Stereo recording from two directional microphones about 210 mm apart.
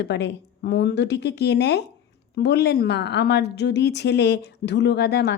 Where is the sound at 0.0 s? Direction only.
55° left (ahead or behind).